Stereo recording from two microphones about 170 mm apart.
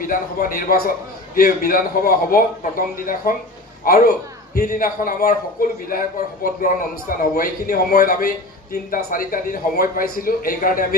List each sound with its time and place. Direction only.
0.0 s a man's voice: 55° left (ahead or behind)